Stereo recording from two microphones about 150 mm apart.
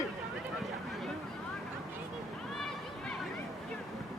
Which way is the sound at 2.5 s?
Centre (ahead or behind).